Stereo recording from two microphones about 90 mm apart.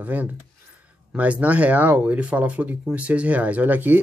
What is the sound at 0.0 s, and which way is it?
Speech, 20° right (ahead or behind).